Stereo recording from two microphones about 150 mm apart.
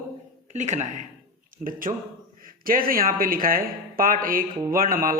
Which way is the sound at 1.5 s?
60° right (ahead or behind).